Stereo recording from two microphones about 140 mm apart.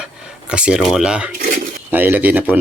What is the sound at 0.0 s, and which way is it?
Speech, 10° right (ahead or behind).